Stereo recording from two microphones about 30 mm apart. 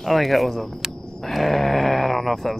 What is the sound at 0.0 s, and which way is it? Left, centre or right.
Speech, centre.